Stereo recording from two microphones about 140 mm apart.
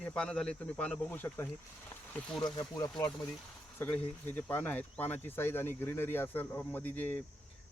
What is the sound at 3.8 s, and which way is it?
Speech, 15° left (ahead or behind).